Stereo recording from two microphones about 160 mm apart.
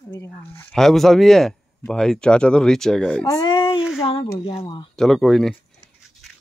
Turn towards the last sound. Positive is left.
turn(degrees=0)  # may be behind; listen again after turning